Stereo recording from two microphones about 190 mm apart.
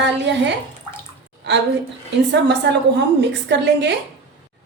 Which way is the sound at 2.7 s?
65° right (ahead or behind).